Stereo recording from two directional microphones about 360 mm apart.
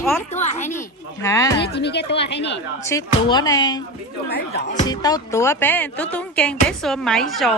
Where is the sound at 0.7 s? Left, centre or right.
Centre.